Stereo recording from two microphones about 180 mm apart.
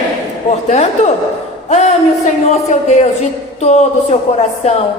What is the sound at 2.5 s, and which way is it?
Speech, 40° left (ahead or behind).